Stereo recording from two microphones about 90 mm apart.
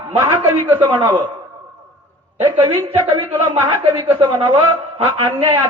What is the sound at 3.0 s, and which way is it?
Speech, 80° right.